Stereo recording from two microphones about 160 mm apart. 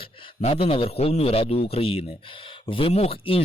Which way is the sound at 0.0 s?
35° left (ahead or behind).